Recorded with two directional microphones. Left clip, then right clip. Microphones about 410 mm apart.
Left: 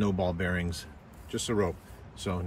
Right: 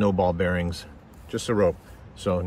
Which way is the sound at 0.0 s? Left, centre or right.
Centre.